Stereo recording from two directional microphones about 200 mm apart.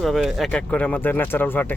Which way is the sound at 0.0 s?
Centre (ahead or behind).